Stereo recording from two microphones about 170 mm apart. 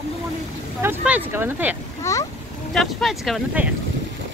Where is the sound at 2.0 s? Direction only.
20° left (ahead or behind).